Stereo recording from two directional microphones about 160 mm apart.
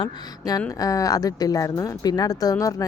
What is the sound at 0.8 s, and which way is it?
A woman's voice, 20° left (ahead or behind).